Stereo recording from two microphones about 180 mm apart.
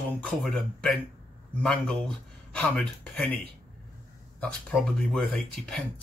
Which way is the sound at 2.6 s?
5° left (ahead or behind).